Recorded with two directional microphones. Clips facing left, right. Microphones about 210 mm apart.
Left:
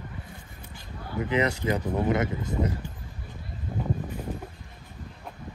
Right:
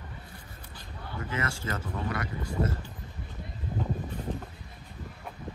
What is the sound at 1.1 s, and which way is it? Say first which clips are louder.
Speech: left 9 dB; 20° left (ahead or behind).